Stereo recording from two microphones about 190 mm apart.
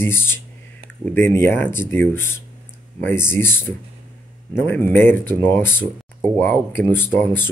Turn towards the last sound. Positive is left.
turn(degrees=10)  # may be behind; listen again after turning